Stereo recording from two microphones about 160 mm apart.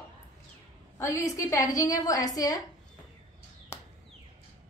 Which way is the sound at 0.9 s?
20° left (ahead or behind).